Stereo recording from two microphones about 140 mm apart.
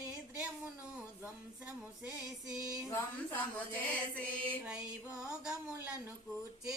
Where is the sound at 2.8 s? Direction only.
15° left (ahead or behind).